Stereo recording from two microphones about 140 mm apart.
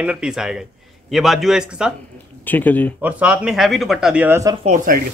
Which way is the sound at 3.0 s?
10° right (ahead or behind).